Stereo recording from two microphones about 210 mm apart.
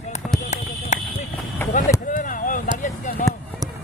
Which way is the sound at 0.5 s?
35° left (ahead or behind).